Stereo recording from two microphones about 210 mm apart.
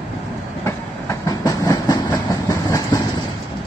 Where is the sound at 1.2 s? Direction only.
15° left (ahead or behind).